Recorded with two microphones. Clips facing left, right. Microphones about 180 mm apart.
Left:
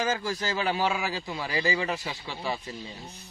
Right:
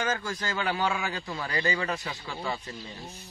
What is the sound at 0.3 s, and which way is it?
A man's voice, 20° left (ahead or behind).